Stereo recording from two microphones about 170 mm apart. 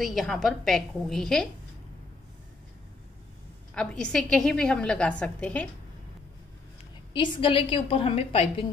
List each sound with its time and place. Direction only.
0.0 s a woman's voice: centre (ahead or behind)
3.7 s a woman's voice: 5° left (ahead or behind)
7.2 s a woman's voice: 30° left (ahead or behind)